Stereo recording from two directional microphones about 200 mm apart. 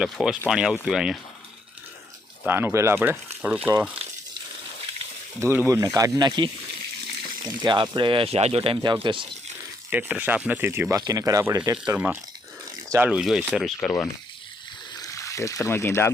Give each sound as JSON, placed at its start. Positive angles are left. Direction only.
{"t": 0.0, "sound": "speech", "side_deg": -5}
{"t": 2.4, "sound": "speech", "side_deg": -10}
{"t": 5.4, "sound": "speech", "side_deg": -10}
{"t": 9.9, "sound": "speech", "side_deg": -10}
{"t": 12.9, "sound": "speech", "side_deg": -5}
{"t": 14.9, "sound": "speech", "side_deg": 15}